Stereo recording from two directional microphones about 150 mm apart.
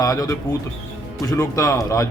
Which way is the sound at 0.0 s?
25° left (ahead or behind).